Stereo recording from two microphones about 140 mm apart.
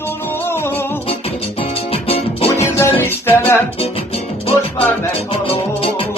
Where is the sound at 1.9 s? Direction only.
45° left (ahead or behind).